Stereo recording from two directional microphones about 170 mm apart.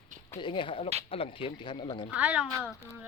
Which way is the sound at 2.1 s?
5° right (ahead or behind).